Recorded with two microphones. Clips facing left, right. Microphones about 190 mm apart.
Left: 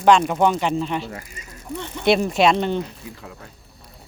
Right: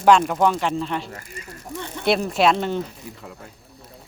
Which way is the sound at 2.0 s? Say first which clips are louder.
Left 2 dB; centre (ahead or behind).